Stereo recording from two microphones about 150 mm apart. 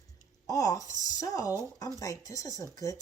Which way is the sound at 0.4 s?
25° left (ahead or behind).